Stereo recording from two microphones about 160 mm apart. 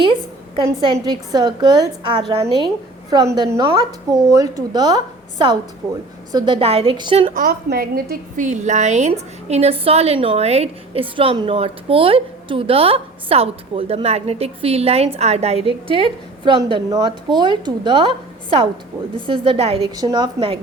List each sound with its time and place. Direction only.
0.5 s a woman's voice: 30° right (ahead or behind)
7.3 s a woman's voice: 60° right (ahead or behind)
8.1 s a woman's voice: 50° right (ahead or behind); by 18.1 s 30° right (ahead or behind)
19.1 s a woman's voice: 35° right (ahead or behind)
20.0 s a woman's voice: 25° right (ahead or behind)